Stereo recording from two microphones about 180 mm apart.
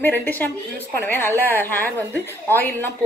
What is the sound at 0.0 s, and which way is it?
A woman's voice, 10° left (ahead or behind).